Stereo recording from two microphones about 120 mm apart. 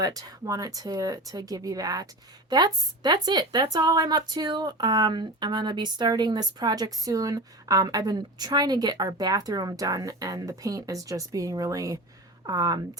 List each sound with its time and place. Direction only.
0.0 s a woman's voice: 30° right (ahead or behind)